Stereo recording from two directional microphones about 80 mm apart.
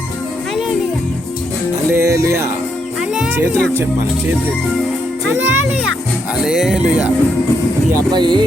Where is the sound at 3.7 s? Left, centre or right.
Right.